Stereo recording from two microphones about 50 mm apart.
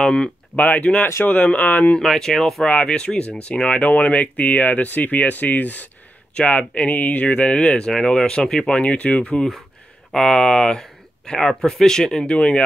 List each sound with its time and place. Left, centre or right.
0.0 s speech: centre
0.6 s speech: left
2.0 s speech: centre
10.1 s speech: centre
12.3 s speech: left